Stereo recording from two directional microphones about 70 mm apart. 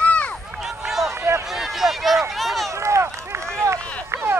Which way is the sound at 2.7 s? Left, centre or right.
Right.